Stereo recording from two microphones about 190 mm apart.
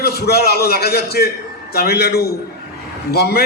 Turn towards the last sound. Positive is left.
turn(degrees=55)  # may be behind; listen again after turning